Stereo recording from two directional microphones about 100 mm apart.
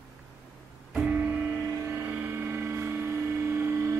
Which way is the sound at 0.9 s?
10° right (ahead or behind).